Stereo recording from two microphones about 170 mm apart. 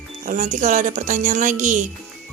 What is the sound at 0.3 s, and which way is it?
Speech, 50° right (ahead or behind).